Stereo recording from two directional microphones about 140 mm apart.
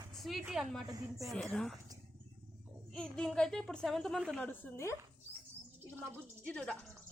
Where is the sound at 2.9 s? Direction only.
5° left (ahead or behind).